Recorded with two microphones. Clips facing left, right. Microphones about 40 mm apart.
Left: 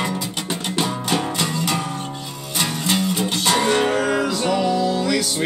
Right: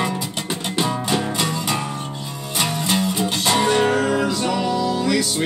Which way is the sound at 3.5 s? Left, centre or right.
Left.